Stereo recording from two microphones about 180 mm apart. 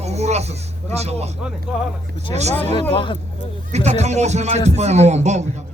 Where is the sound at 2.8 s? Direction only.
30° left (ahead or behind).